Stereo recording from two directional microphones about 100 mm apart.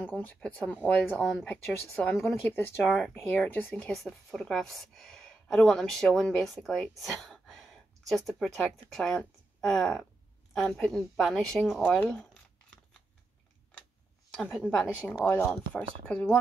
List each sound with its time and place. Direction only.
0.0 s speech: 15° left (ahead or behind)
2.8 s speech: 5° left (ahead or behind)
3.4 s speech: 15° left (ahead or behind); by 11.8 s centre (ahead or behind)
11.9 s zipper: 10° left (ahead or behind)
14.3 s a woman's voice: centre (ahead or behind)